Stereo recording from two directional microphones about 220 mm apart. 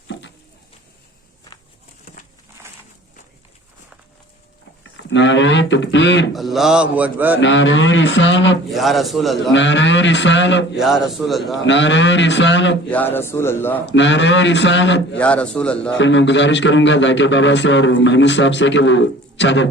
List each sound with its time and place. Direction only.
5.0 s a man's voice: 55° left (ahead or behind)
6.3 s a man's voice: centre (ahead or behind)
7.3 s a man's voice: 55° left (ahead or behind)
8.7 s a man's voice: centre (ahead or behind)
9.5 s a man's voice: 55° left (ahead or behind)
10.8 s a man's voice: centre (ahead or behind)
11.5 s a man's voice: 55° left (ahead or behind)
12.9 s a man's voice: 10° left (ahead or behind)
13.8 s a man's voice: 55° left (ahead or behind)
15.2 s a man's voice: 5° left (ahead or behind)
16.0 s a man's voice: 55° left (ahead or behind)